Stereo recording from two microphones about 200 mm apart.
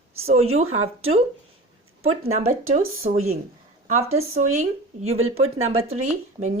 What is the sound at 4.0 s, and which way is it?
Speech, 90° right.